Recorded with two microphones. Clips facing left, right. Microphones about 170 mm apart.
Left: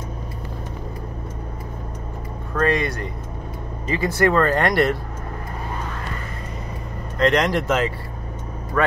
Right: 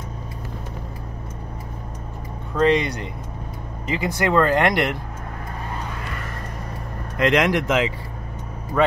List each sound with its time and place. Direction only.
2.5 s speech: 20° right (ahead or behind)
7.2 s speech: 15° right (ahead or behind)